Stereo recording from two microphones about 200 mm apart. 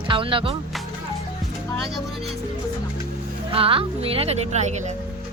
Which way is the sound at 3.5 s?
25° right (ahead or behind).